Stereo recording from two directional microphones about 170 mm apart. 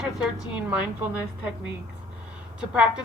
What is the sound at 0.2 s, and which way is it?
Speech, 5° right (ahead or behind).